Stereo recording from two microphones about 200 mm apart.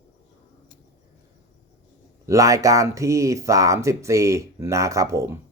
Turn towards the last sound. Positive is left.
turn(degrees=-15)  # may be behind; listen again after turning